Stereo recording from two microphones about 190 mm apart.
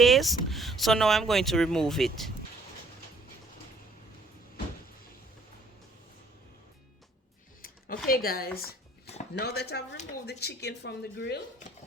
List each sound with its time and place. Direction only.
0.0 s speech: centre (ahead or behind)
7.6 s speech: 50° left (ahead or behind)